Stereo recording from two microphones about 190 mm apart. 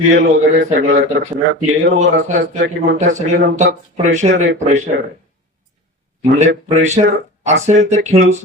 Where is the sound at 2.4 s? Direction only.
70° right (ahead or behind).